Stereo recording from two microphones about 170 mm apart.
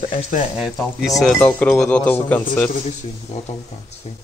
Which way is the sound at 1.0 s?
Centre (ahead or behind).